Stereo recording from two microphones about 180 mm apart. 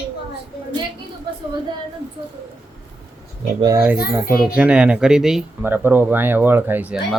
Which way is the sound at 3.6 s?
20° right (ahead or behind).